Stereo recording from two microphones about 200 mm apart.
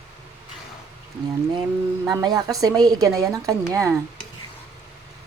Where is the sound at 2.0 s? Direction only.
20° right (ahead or behind).